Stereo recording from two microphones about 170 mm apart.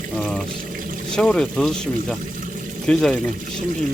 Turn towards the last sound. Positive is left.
turn(degrees=5)  # may be behind; listen again after turning